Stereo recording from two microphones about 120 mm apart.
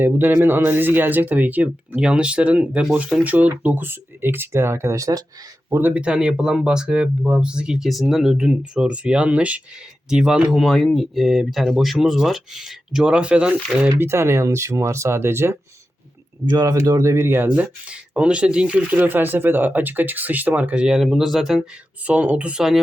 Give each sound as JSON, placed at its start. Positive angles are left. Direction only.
{"t": 0.0, "sound": "speech", "side_deg": -15}
{"t": 5.7, "sound": "speech", "side_deg": -15}
{"t": 14.0, "sound": "speech", "side_deg": -20}
{"t": 16.5, "sound": "speech", "side_deg": -30}